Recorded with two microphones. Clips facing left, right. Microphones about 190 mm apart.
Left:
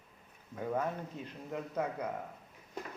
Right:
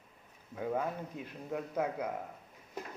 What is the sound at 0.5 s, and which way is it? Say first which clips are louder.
A man's voice: even; 5° right (ahead or behind).